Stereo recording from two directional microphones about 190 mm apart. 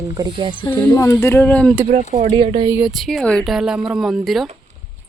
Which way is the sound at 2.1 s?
40° right (ahead or behind).